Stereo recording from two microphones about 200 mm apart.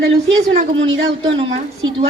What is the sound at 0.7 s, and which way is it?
Speech, 70° right (ahead or behind).